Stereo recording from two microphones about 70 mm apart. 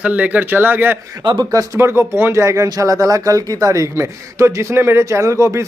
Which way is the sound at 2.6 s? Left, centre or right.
Right.